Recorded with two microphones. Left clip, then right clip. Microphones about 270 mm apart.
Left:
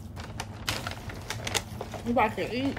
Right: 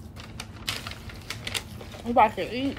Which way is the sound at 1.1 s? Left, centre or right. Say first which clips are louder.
Right 1 dB; left.